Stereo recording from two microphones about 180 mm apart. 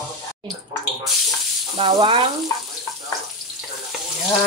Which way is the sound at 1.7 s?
30° right (ahead or behind).